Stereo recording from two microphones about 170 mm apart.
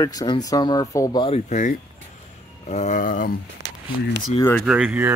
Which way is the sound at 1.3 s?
45° left (ahead or behind).